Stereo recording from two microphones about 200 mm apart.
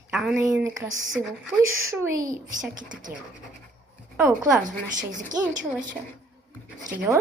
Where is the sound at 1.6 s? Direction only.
90° right.